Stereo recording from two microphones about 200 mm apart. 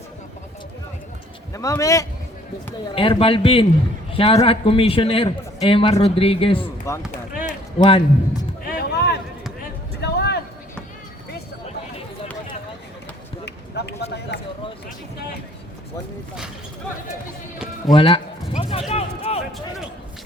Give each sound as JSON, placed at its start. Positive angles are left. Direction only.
{"t": 1.5, "sound": "speech", "side_deg": 15}
{"t": 2.9, "sound": "a man's voice", "side_deg": 25}
{"t": 6.9, "sound": "a man's voice", "side_deg": 15}
{"t": 8.6, "sound": "basketball bounce", "side_deg": 50}
{"t": 10.0, "sound": "vehicle", "side_deg": 55}
{"t": 13.4, "sound": "a sound", "side_deg": 60}
{"t": 17.9, "sound": "a sound", "side_deg": 25}